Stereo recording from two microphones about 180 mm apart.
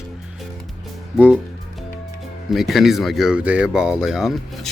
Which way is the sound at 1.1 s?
5° right (ahead or behind).